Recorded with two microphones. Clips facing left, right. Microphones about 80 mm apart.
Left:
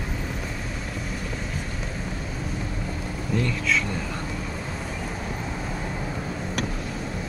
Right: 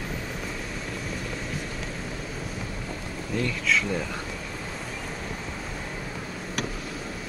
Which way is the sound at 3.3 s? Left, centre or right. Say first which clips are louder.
Left 1 dB; centre.